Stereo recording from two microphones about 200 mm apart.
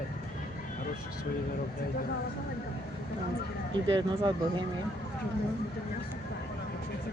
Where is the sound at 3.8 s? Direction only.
25° right (ahead or behind).